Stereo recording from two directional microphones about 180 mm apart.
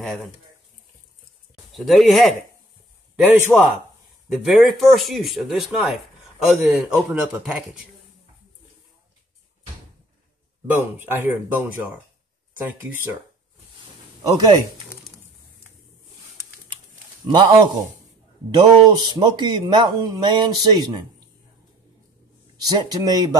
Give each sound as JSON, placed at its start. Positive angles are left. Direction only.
{"t": 0.0, "sound": "speech", "side_deg": 0}
{"t": 1.8, "sound": "speech", "side_deg": 0}
{"t": 3.5, "sound": "speech", "side_deg": 0}
{"t": 10.8, "sound": "speech", "side_deg": -10}
{"t": 14.2, "sound": "speech", "side_deg": -20}
{"t": 17.3, "sound": "speech", "side_deg": -25}
{"t": 22.6, "sound": "speech", "side_deg": -20}